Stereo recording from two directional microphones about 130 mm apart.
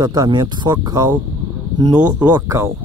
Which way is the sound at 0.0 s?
30° right (ahead or behind).